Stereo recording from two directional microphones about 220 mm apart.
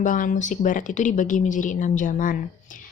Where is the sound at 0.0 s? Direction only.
35° left (ahead or behind).